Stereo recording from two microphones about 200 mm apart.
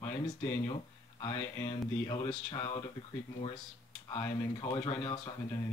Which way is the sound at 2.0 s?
25° left (ahead or behind).